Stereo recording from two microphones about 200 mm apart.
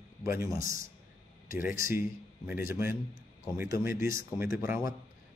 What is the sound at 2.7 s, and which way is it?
Speech, 10° right (ahead or behind).